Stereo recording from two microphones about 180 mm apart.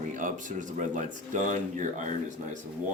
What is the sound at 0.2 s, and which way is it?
Speech, 45° right (ahead or behind).